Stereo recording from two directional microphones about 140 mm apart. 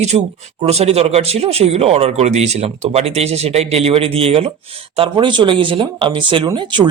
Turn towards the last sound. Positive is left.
turn(degrees=-35)  # may be behind; listen again after turning